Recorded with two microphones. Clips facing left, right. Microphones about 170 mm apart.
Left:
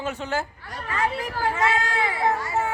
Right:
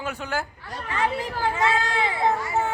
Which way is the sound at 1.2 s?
25° right (ahead or behind).